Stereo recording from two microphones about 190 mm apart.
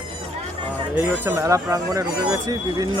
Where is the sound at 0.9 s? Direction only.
15° right (ahead or behind).